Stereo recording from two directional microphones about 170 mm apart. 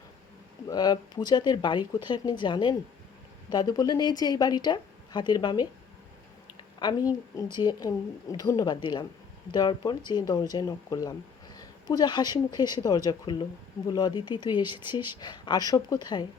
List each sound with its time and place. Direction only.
0.7 s a woman's voice: 25° left (ahead or behind)
6.7 s a woman's voice: 25° left (ahead or behind)